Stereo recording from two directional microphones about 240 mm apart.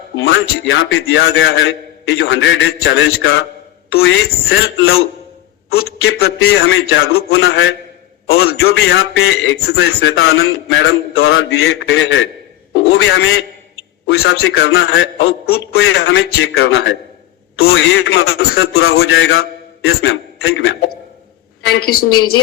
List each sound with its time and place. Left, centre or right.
0.2 s a man's voice: left
5.6 s a man's voice: left